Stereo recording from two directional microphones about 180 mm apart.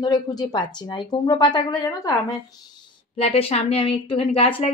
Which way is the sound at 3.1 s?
35° left (ahead or behind).